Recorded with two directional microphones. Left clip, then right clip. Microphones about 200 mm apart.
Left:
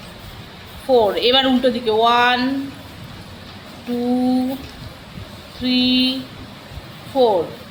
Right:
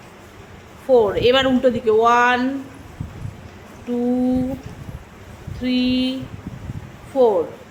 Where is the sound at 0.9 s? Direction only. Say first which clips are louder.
Even; 25° right (ahead or behind).